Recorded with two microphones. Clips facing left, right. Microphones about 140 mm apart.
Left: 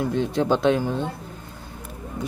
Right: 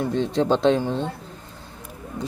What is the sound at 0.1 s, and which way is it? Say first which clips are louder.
Speech: right 1 dB; 25° right (ahead or behind).